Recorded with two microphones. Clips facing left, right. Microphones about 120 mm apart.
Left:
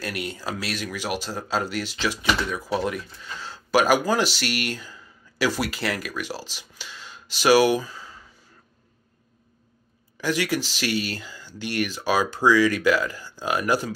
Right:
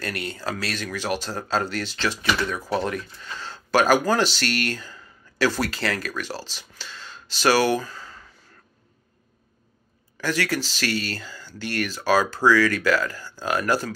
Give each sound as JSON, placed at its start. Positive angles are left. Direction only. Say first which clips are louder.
{"t": 0.0, "sound": "speech", "louder": "right 1 dB", "side_deg": 10}
{"t": 10.2, "sound": "speech", "louder": "left 1 dB", "side_deg": 15}